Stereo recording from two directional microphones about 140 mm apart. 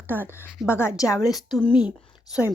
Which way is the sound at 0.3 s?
15° left (ahead or behind).